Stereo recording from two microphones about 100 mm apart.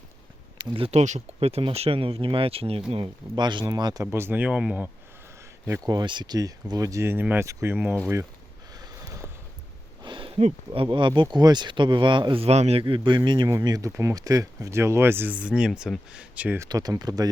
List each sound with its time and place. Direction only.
0.6 s speech: 50° right (ahead or behind)
0.9 s speech: 90° right; by 2.8 s 75° right (ahead or behind)
3.3 s speech: 50° right (ahead or behind)
4.0 s speech: 25° right (ahead or behind)
5.8 s speech: 40° right (ahead or behind); by 7.9 s 20° right (ahead or behind)
8.7 s snort: 40° right (ahead or behind)
10.0 s a sound: 55° right (ahead or behind); by 10.8 s 75° right (ahead or behind)
10.9 s speech: 55° right (ahead or behind); by 12.8 s 90° right
12.8 s speech: 50° right (ahead or behind); by 16.6 s 15° right (ahead or behind)
16.6 s speech: 40° right (ahead or behind)